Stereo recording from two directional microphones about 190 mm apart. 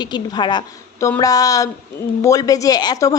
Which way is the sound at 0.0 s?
25° left (ahead or behind).